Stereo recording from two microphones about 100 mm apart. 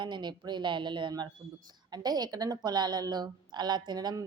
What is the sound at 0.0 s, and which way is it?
A woman's voice, 50° right (ahead or behind).